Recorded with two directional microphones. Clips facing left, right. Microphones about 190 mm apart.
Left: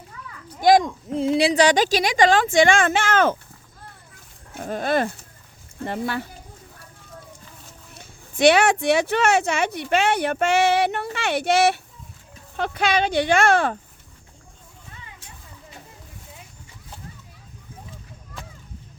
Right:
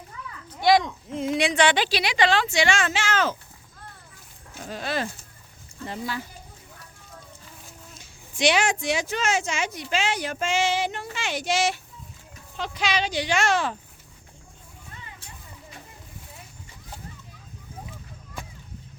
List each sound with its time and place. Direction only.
0.6 s a sound: 45° left (ahead or behind)
1.2 s a woman's voice: 30° left (ahead or behind); by 3.3 s 55° left (ahead or behind)
4.5 s speech: 55° left (ahead or behind)
7.9 s speech: 60° left (ahead or behind)